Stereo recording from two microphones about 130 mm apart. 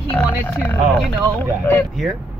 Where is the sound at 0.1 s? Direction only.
15° left (ahead or behind).